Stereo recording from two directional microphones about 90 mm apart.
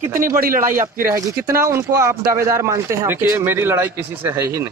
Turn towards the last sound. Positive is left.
turn(degrees=-35)  # may be behind; listen again after turning